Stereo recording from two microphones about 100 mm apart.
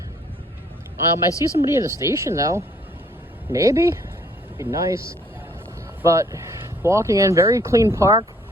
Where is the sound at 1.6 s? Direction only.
30° right (ahead or behind).